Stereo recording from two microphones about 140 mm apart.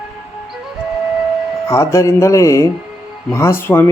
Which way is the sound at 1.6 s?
20° left (ahead or behind).